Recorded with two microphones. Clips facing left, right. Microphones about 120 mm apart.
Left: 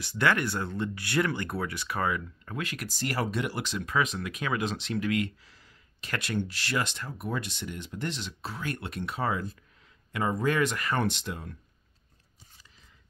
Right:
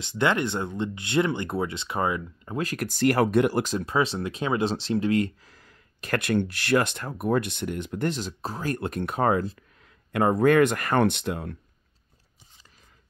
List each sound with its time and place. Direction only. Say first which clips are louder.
0.0 s speech: right 3 dB; 20° right (ahead or behind)
2.6 s speech: right 7 dB; 40° right (ahead or behind)
2.9 s speech: right 11 dB; 60° right (ahead or behind); by 3.8 s 45° right (ahead or behind)
3.8 s speech: right 4 dB; 30° right (ahead or behind); by 11.5 s 60° right (ahead or behind)